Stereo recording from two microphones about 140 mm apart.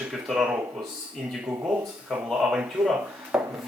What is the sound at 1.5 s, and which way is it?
Speech, 20° right (ahead or behind).